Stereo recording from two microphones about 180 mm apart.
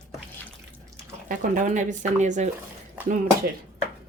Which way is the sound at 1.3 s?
50° right (ahead or behind).